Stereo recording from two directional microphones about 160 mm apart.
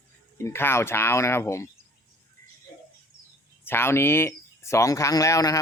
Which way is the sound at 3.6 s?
15° left (ahead or behind).